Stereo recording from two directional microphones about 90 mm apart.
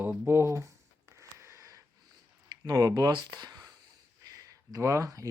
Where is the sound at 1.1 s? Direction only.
30° right (ahead or behind).